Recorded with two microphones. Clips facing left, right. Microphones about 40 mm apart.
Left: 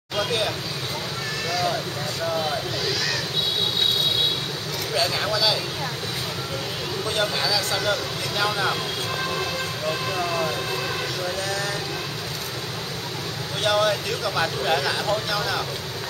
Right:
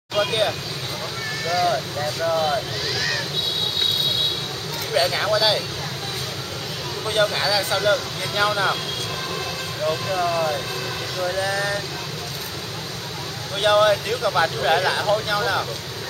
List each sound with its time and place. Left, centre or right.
0.1 s speech: centre
1.5 s speech: centre
4.9 s speech: centre
7.1 s speech: centre
9.3 s train: centre
11.2 s speech: centre
13.6 s speech: centre